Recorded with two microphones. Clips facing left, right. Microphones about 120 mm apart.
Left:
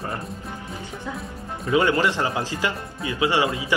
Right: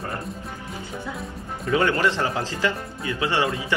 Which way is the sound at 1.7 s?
15° left (ahead or behind).